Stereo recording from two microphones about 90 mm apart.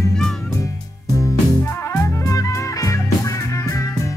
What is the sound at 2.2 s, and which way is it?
Music, 40° left (ahead or behind).